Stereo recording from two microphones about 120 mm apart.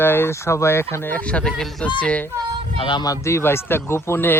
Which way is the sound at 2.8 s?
40° left (ahead or behind).